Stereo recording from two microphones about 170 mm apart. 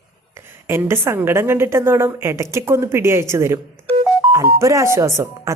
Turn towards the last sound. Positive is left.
turn(degrees=-15)  # may be behind; listen again after turning